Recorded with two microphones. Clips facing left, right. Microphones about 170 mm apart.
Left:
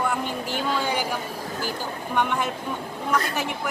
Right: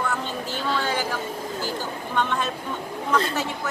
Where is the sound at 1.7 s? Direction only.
15° left (ahead or behind).